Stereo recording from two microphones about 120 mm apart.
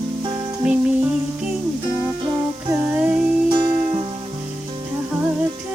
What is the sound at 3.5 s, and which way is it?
Music, 40° right (ahead or behind).